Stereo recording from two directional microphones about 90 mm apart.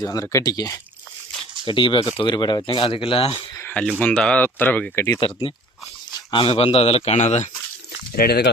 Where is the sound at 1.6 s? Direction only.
65° left (ahead or behind).